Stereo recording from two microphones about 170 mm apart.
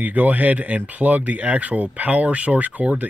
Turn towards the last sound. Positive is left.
turn(degrees=-10)  # may be behind; listen again after turning